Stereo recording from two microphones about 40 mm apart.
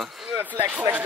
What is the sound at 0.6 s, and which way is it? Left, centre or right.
Speech, right.